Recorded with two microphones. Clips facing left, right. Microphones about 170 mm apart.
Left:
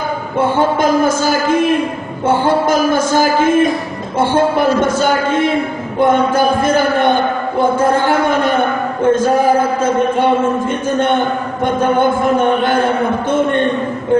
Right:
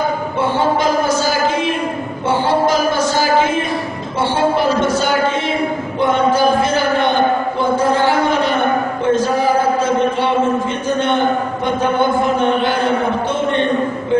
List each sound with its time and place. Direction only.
0.4 s music: 50° left (ahead or behind)
4.2 s speech: 50° left (ahead or behind)
6.6 s a sound: 50° left (ahead or behind)
9.0 s a man's voice: 50° left (ahead or behind)
9.8 s mantra: 50° left (ahead or behind)
11.6 s speech: 50° left (ahead or behind)